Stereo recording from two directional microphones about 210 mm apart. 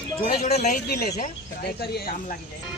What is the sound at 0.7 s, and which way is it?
Speech, 50° left (ahead or behind).